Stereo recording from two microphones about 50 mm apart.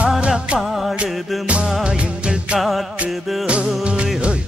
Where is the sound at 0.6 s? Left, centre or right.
Centre.